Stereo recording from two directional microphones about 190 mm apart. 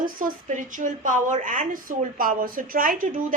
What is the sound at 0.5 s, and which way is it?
A woman's voice, 45° right (ahead or behind).